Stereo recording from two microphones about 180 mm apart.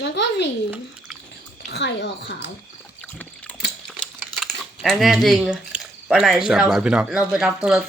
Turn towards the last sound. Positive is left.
turn(degrees=-5)  # may be behind; listen again after turning